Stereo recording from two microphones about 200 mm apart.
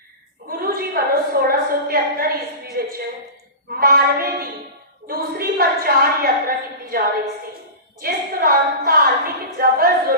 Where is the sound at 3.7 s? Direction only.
45° right (ahead or behind).